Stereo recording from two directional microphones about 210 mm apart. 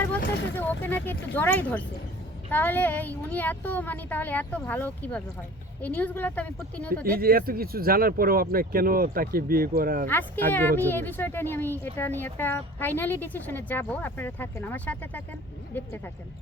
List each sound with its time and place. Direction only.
0.5 s speech: 10° left (ahead or behind)
7.2 s speech: 45° right (ahead or behind)
10.1 s speech: 10° left (ahead or behind)